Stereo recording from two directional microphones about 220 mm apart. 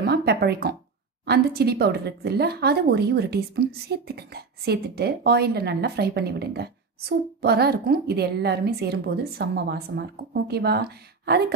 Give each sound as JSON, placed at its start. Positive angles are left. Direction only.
{"t": 0.0, "sound": "a woman's voice", "side_deg": -45}